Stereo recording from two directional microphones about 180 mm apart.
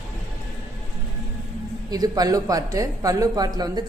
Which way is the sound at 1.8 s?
20° right (ahead or behind).